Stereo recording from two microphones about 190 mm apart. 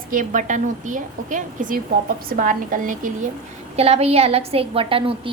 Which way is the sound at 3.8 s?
35° right (ahead or behind).